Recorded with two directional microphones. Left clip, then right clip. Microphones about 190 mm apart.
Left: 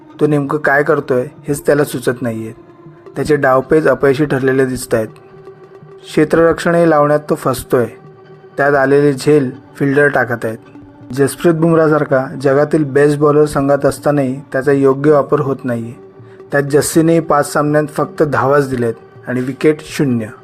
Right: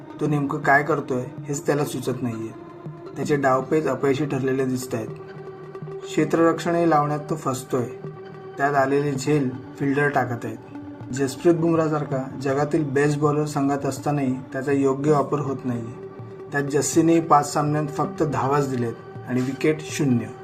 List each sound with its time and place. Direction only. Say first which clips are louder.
0.2 s speech: left 11 dB; 45° left (ahead or behind)
6.1 s speech: left 9 dB; 45° left (ahead or behind)